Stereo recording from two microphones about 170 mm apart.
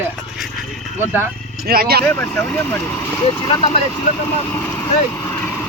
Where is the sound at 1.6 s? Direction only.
65° right (ahead or behind).